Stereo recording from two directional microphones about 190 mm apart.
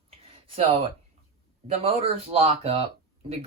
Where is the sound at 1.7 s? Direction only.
30° right (ahead or behind).